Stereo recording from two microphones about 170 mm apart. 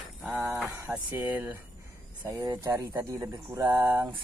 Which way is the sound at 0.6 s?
10° right (ahead or behind).